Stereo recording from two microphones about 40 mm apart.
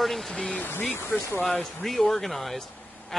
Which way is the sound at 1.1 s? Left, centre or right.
Left.